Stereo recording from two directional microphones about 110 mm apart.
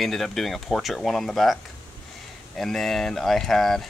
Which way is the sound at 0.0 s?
Centre (ahead or behind).